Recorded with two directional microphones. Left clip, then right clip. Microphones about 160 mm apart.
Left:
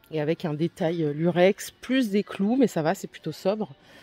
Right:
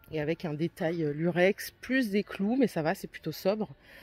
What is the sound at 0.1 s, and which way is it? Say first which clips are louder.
Speech: left 5 dB; centre (ahead or behind).